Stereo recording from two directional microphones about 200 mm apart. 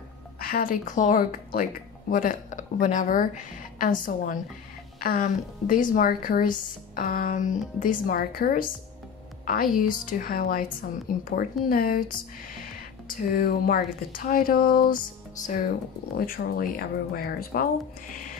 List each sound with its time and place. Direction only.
0.4 s a woman's voice: 45° left (ahead or behind)
13.1 s a woman's voice: 50° left (ahead or behind)